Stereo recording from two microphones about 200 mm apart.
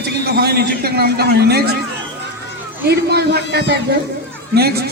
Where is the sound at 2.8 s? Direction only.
55° right (ahead or behind).